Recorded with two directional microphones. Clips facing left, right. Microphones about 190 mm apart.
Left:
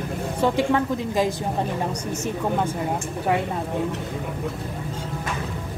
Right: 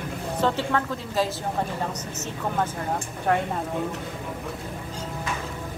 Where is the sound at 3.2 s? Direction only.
5° left (ahead or behind).